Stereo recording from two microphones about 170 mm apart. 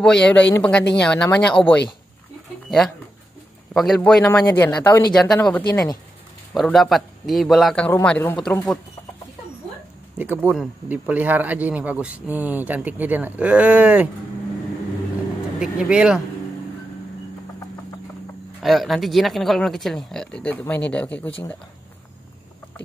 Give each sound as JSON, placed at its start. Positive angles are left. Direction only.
{"t": 0.0, "sound": "a man's voice", "side_deg": 5}
{"t": 3.7, "sound": "a man's voice", "side_deg": 0}
{"t": 10.1, "sound": "speech", "side_deg": -10}
{"t": 15.6, "sound": "a man's voice", "side_deg": -5}
{"t": 18.6, "sound": "a man's voice", "side_deg": 0}